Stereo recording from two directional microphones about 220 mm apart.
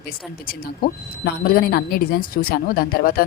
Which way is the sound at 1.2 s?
40° left (ahead or behind).